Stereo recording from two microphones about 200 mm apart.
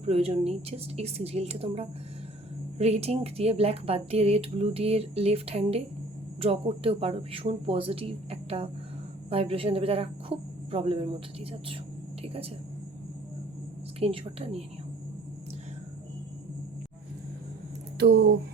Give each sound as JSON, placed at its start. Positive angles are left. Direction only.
{"t": 0.0, "sound": "speech", "side_deg": -30}
{"t": 14.0, "sound": "speech", "side_deg": -30}
{"t": 17.9, "sound": "speech", "side_deg": -60}